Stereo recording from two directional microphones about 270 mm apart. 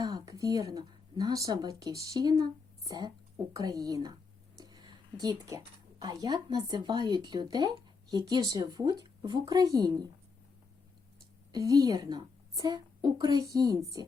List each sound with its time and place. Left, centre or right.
0.0 s speech: centre
4.5 s a sound: centre
6.0 s speech: centre
11.5 s speech: centre